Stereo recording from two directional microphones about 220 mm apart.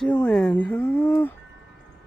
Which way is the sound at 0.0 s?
5° left (ahead or behind).